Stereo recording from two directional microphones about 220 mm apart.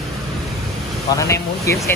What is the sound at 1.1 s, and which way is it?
Speech, 15° left (ahead or behind).